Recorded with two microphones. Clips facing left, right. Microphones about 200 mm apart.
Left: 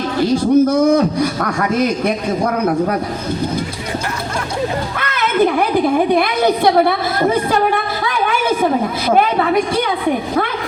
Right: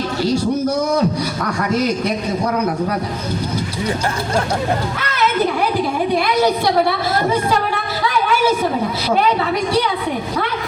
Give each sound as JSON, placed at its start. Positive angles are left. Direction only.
{"t": 0.2, "sound": "speech", "side_deg": 55}
{"t": 4.9, "sound": "a woman's voice", "side_deg": 55}